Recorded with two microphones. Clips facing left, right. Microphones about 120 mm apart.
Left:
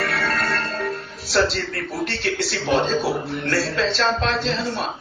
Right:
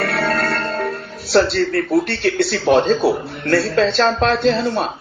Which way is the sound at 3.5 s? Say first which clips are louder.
Right 8 dB; 45° right (ahead or behind).